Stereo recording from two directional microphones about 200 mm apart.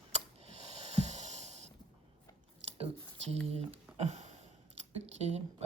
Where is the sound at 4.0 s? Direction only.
35° right (ahead or behind).